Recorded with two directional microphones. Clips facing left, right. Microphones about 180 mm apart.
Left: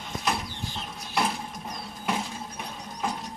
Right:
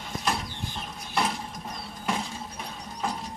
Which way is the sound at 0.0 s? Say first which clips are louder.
Even; centre (ahead or behind).